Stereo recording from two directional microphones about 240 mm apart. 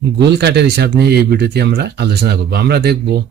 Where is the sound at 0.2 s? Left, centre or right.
Right.